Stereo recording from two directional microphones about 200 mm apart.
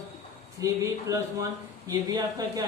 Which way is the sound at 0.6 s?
15° right (ahead or behind).